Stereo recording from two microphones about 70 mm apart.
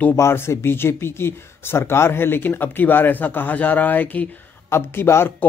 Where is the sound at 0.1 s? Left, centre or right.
Left.